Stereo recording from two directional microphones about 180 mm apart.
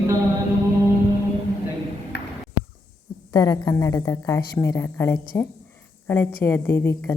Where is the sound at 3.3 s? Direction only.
20° left (ahead or behind).